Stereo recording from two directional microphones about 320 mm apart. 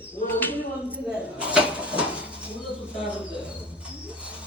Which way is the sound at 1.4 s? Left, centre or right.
Centre.